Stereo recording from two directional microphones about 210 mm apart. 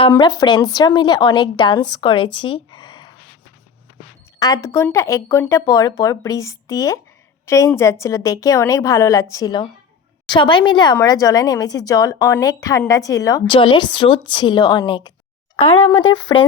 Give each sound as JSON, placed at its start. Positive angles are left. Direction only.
{"t": 0.1, "sound": "a woman's voice", "side_deg": 20}
{"t": 4.4, "sound": "a woman's voice", "side_deg": 15}
{"t": 16.3, "sound": "a woman's voice", "side_deg": 20}